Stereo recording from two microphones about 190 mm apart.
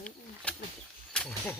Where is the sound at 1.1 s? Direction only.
5° left (ahead or behind).